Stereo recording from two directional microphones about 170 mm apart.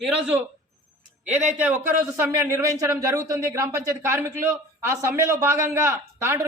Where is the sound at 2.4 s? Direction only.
15° right (ahead or behind).